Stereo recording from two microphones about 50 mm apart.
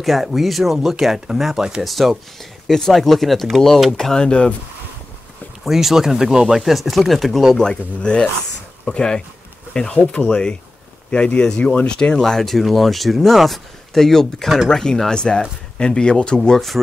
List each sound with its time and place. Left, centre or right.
0.0 s speech: centre
1.9 s speech: centre; by 4.6 s left
5.6 s speech: centre
7.5 s speech: centre
12.2 s speech: centre
16.4 s speech: centre